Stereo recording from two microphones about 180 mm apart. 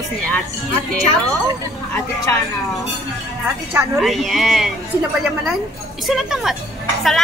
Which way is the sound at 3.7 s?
15° right (ahead or behind).